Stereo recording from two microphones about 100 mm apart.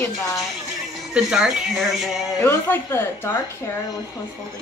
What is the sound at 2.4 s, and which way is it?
Speech, 25° left (ahead or behind).